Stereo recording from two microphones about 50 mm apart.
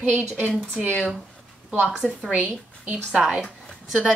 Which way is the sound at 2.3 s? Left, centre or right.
Right.